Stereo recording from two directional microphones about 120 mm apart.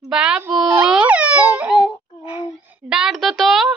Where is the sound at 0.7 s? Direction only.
10° right (ahead or behind).